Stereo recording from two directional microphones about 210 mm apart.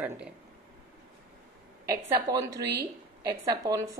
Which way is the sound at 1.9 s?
15° right (ahead or behind).